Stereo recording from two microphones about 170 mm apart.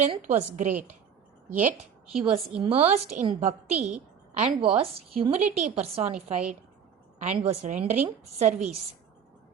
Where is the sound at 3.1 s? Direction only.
45° right (ahead or behind).